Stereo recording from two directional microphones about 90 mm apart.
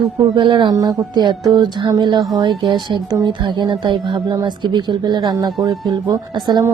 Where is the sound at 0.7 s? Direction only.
45° right (ahead or behind).